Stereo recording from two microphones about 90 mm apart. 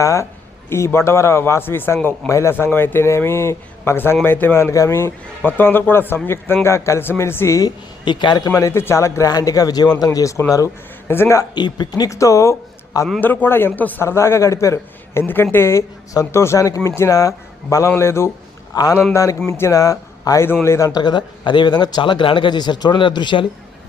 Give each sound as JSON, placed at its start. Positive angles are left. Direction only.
{"t": 0.0, "sound": "a man's voice", "side_deg": 35}
{"t": 8.0, "sound": "a man's voice", "side_deg": 60}
{"t": 8.5, "sound": "a man's voice", "side_deg": 30}
{"t": 11.5, "sound": "a man's voice", "side_deg": 55}
{"t": 13.1, "sound": "speech", "side_deg": 20}
{"t": 14.0, "sound": "a man's voice", "side_deg": 30}
{"t": 18.7, "sound": "a man's voice", "side_deg": 40}
{"t": 21.0, "sound": "a man's voice", "side_deg": 55}